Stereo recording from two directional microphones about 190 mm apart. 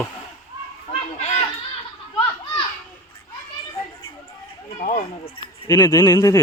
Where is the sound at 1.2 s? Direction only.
35° left (ahead or behind).